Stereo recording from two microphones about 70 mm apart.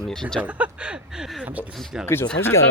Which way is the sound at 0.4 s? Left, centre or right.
Centre.